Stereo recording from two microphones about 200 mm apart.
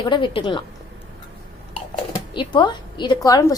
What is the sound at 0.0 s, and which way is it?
Speech, 25° left (ahead or behind).